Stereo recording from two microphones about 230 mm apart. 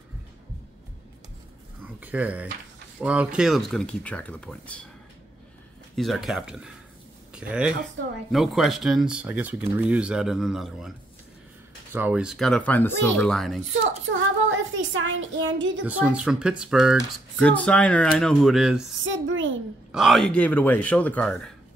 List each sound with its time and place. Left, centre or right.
2.0 s speech: centre
5.9 s speech: centre
11.9 s speech: centre
14.1 s speech: right
15.8 s speech: centre
19.0 s a sound: right
19.9 s speech: centre